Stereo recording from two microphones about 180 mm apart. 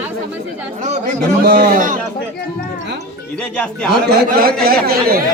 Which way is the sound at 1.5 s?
65° right (ahead or behind).